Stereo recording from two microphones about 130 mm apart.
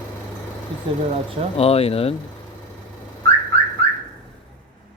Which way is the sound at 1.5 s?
50° left (ahead or behind).